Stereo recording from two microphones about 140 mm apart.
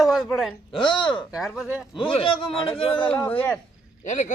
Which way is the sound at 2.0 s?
40° left (ahead or behind).